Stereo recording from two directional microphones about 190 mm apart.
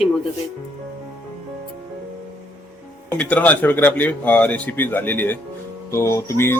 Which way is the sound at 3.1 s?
5° left (ahead or behind).